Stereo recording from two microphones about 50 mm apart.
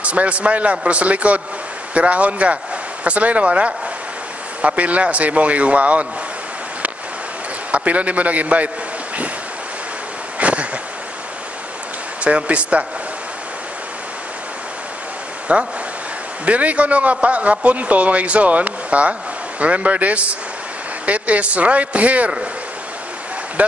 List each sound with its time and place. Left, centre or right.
0.0 s a man's voice: right
7.7 s a man's voice: right
10.4 s a sound: right
12.2 s a man's voice: right
15.5 s a man's voice: right